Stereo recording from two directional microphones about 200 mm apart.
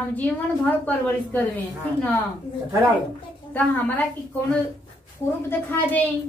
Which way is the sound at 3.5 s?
10° left (ahead or behind).